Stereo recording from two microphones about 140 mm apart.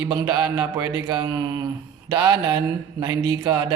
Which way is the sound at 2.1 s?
30° right (ahead or behind).